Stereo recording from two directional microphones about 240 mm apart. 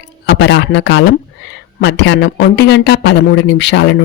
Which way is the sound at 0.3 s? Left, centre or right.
Left.